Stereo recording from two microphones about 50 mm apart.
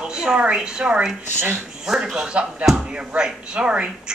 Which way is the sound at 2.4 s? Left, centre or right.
Right.